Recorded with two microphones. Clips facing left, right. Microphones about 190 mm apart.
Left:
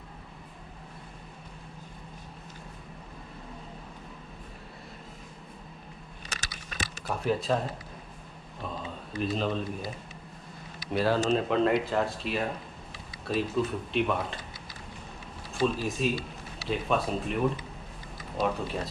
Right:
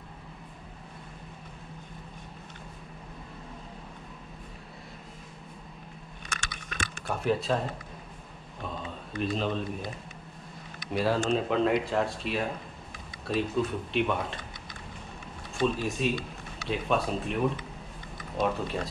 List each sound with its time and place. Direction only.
6.5 s typing: 50° right (ahead or behind)
7.1 s speech: centre (ahead or behind)
8.6 s a sound: centre (ahead or behind)
10.9 s speech: centre (ahead or behind)
15.5 s speech: centre (ahead or behind)